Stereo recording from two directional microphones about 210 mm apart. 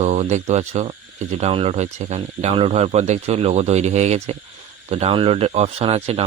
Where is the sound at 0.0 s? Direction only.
30° right (ahead or behind).